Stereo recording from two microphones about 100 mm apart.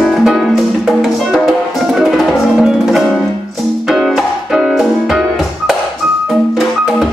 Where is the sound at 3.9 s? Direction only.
5° right (ahead or behind).